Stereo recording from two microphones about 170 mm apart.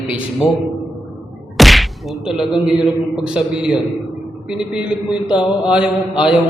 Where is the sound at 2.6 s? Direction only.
5° right (ahead or behind).